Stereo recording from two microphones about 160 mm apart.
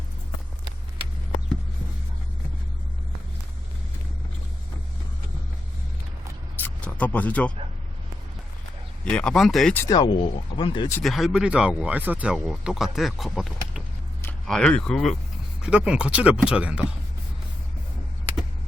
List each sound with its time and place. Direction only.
6.6 s a sound: 10° left (ahead or behind)
9.0 s speech: 5° left (ahead or behind)
9.7 s speech: 20° left (ahead or behind)
11.0 s speech: centre (ahead or behind)